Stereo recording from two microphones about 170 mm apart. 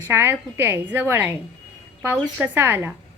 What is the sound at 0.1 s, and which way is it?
A woman's voice, 15° right (ahead or behind).